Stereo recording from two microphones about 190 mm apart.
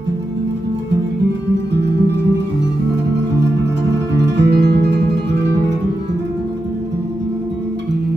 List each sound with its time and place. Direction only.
4.4 s guitar: 65° right (ahead or behind)